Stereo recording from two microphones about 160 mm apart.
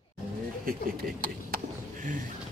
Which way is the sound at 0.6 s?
60° right (ahead or behind).